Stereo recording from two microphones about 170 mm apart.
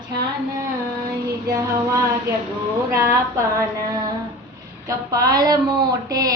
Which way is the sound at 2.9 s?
15° right (ahead or behind).